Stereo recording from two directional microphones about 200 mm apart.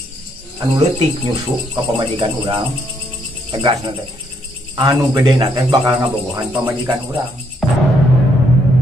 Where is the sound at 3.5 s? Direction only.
25° right (ahead or behind).